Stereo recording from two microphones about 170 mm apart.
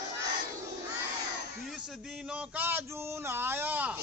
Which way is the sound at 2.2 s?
10° right (ahead or behind).